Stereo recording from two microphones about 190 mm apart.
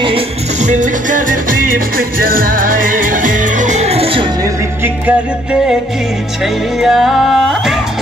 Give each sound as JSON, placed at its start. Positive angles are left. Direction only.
{"t": 0.0, "sound": "music", "side_deg": -35}
{"t": 4.8, "sound": "music", "side_deg": -5}